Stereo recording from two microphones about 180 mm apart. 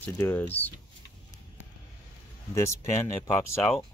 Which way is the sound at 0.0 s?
10° left (ahead or behind).